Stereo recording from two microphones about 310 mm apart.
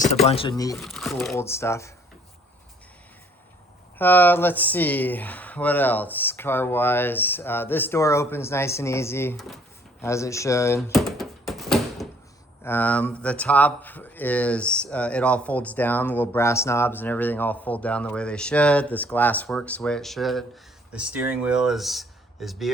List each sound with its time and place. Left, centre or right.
0.0 s speech: centre
0.8 s speech: centre
3.9 s speech: centre
10.0 s door: centre
12.6 s speech: centre